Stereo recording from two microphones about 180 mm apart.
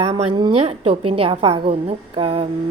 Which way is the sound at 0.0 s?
35° right (ahead or behind).